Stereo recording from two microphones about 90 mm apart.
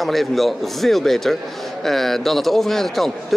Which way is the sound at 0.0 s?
Centre (ahead or behind).